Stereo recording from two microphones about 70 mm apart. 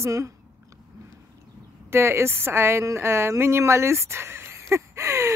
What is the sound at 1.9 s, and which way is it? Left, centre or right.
Speech, right.